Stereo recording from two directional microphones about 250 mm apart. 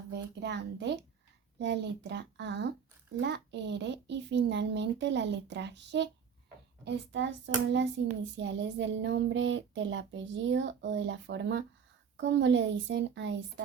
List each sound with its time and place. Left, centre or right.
0.1 s speech: right